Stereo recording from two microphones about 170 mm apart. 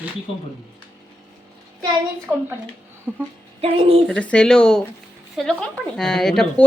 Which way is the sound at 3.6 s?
35° right (ahead or behind).